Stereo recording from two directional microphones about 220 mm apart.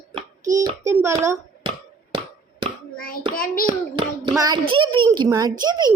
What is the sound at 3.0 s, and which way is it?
Speech, 40° left (ahead or behind).